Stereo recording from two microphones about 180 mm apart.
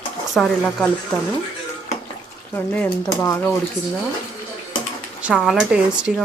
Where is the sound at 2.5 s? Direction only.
10° left (ahead or behind).